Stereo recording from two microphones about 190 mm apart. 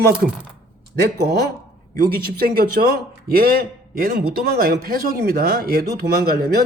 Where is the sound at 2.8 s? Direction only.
55° right (ahead or behind).